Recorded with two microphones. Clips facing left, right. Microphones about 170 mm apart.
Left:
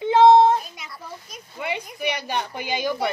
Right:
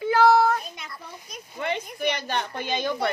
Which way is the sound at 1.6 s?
10° left (ahead or behind).